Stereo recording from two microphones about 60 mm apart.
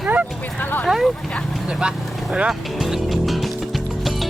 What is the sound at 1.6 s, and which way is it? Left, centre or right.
Vehicle, centre.